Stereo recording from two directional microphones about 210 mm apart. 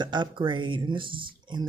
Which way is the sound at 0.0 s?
20° right (ahead or behind).